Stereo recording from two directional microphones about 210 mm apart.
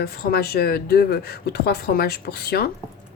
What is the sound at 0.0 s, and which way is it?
A woman's voice, 45° left (ahead or behind).